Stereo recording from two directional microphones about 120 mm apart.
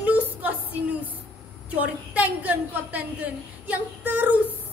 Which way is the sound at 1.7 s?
10° right (ahead or behind).